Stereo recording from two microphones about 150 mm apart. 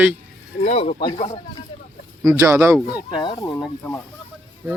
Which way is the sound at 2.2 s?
20° right (ahead or behind).